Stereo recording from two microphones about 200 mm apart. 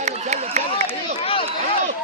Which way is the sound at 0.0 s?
35° right (ahead or behind).